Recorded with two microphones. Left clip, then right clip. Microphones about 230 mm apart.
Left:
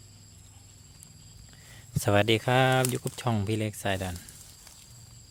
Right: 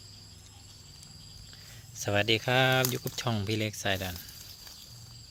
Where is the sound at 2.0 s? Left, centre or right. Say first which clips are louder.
Left 3 dB; left.